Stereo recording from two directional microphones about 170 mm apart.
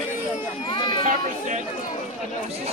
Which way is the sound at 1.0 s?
50° right (ahead or behind).